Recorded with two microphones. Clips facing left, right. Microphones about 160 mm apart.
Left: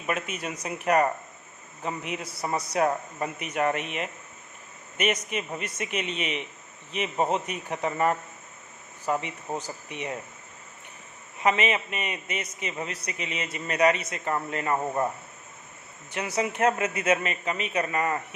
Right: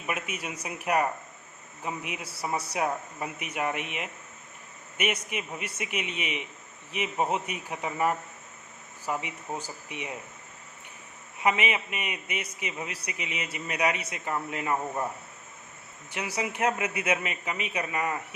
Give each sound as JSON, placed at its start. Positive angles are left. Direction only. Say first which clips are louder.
{"t": 0.1, "sound": "a man's voice", "louder": "left 3 dB", "side_deg": -10}
{"t": 11.4, "sound": "a man's voice", "louder": "left 2 dB", "side_deg": -10}
{"t": 16.1, "sound": "a man's voice", "louder": "left 4 dB", "side_deg": -10}